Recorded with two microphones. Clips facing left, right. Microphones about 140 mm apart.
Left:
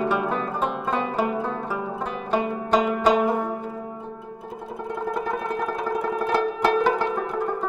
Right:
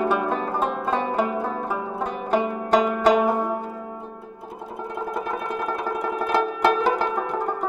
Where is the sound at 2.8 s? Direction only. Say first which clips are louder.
Right 1 dB; 45° right (ahead or behind).